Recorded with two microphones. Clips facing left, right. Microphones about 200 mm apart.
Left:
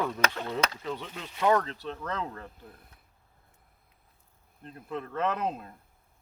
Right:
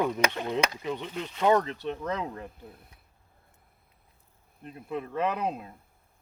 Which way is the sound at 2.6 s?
Centre (ahead or behind).